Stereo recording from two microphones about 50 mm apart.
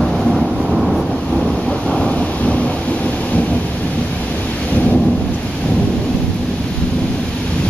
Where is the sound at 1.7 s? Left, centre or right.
Left.